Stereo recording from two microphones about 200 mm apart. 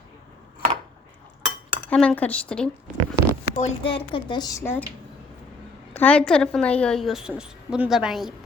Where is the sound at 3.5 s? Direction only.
40° left (ahead or behind).